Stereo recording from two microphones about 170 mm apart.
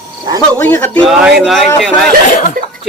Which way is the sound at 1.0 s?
Centre (ahead or behind).